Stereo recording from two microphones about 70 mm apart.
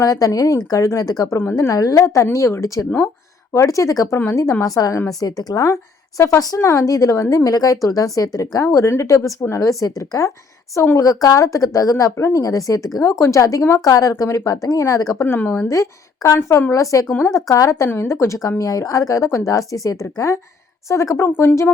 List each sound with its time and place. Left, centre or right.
0.0 s speech: left
5.0 s speech: left
15.2 s speech: left
15.7 s speech: left
17.1 s speech: left
17.3 s speech: left
17.8 s speech: left
21.2 s speech: left